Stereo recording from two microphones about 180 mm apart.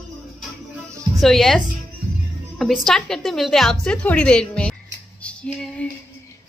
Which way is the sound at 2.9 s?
Centre (ahead or behind).